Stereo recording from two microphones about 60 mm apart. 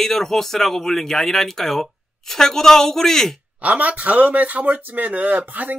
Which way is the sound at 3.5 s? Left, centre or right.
Right.